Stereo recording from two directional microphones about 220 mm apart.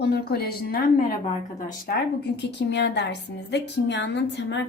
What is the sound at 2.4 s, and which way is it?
A woman's voice, 55° left (ahead or behind).